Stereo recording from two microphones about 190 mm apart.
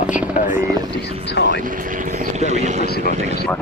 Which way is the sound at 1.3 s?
65° left (ahead or behind).